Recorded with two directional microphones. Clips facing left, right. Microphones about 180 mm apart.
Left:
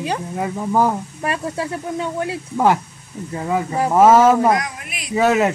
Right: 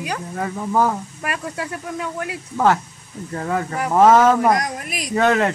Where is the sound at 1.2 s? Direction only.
30° left (ahead or behind).